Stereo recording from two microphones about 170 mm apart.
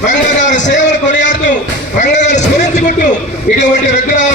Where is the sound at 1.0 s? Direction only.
45° left (ahead or behind).